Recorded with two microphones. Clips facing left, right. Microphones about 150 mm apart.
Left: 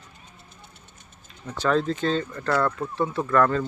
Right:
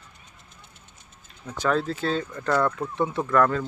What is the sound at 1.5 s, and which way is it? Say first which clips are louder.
Speech: left 2 dB; 10° right (ahead or behind).